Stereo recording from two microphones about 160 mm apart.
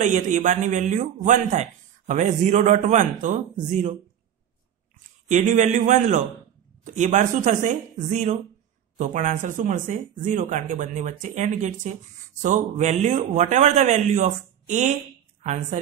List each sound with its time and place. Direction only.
0.0 s a man's voice: 50° right (ahead or behind)
5.3 s a man's voice: 50° right (ahead or behind)